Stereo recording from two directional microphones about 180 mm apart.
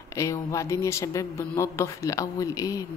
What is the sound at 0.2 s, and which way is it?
Speech, 15° left (ahead or behind).